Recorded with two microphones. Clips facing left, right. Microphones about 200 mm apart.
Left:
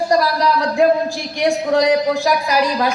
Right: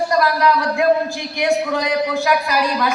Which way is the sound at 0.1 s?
35° left (ahead or behind).